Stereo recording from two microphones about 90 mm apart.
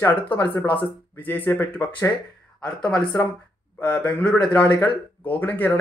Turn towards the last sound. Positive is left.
turn(degrees=20)  # may be behind; listen again after turning